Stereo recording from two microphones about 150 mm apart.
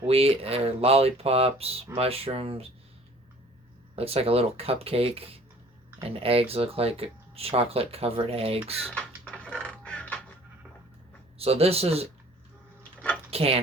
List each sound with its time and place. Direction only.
0.0 s speech: 40° right (ahead or behind)
3.9 s speech: 40° right (ahead or behind)
8.8 s speech: centre (ahead or behind)
9.3 s music: 5° left (ahead or behind)
11.3 s speech: 40° right (ahead or behind)
13.3 s speech: 40° right (ahead or behind)